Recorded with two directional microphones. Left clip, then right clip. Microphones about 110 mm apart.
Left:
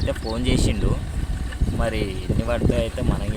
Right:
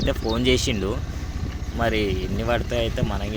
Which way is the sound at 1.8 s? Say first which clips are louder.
Right 4 dB; 20° right (ahead or behind).